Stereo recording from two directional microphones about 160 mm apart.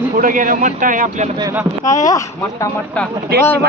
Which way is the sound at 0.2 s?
55° right (ahead or behind).